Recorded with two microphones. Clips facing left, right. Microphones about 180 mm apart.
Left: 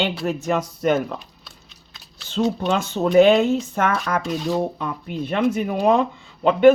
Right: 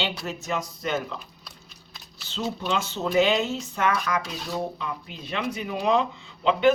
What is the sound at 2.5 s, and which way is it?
Speech, 50° left (ahead or behind).